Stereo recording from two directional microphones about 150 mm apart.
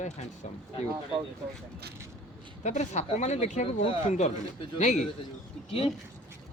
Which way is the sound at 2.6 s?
50° left (ahead or behind).